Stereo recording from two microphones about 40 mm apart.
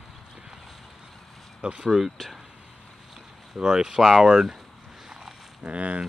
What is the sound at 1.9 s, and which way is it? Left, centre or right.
Speech, centre.